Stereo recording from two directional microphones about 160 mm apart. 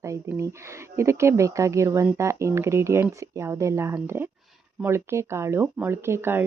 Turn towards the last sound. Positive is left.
turn(degrees=-15)  # may be behind; listen again after turning